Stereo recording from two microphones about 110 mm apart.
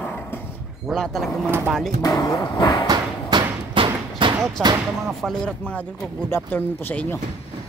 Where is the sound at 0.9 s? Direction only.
5° left (ahead or behind).